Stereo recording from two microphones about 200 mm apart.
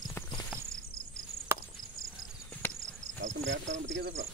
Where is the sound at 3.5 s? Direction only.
65° right (ahead or behind).